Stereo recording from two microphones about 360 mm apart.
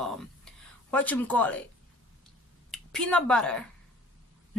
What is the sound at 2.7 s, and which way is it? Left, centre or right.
Speech, centre.